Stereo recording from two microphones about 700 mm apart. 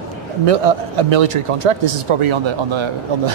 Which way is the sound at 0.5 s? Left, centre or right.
Right.